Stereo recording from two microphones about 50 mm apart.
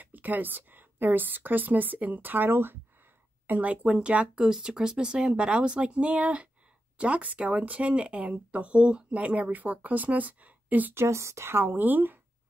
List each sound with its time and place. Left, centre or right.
0.0 s speech: right
3.4 s speech: right
11.0 s speech: right
11.4 s speech: right